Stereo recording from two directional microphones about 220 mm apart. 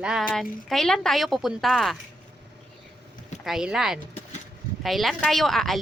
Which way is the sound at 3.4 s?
Centre (ahead or behind).